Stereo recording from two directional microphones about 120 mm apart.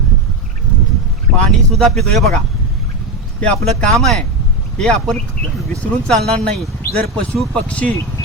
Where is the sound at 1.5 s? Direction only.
Centre (ahead or behind).